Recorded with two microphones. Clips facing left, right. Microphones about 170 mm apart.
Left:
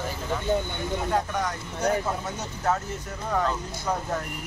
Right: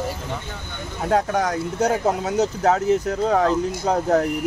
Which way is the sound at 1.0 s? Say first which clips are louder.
Right 9 dB; 90° right.